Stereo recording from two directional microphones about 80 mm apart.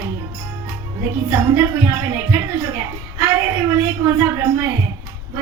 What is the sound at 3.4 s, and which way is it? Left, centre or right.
A woman's voice, right.